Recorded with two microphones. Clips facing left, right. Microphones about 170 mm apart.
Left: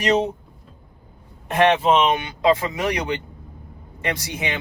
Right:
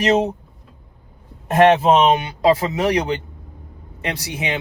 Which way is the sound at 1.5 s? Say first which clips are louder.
Right 4 dB; 40° right (ahead or behind).